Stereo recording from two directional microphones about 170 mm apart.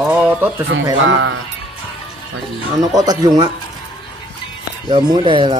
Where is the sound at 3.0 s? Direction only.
25° right (ahead or behind).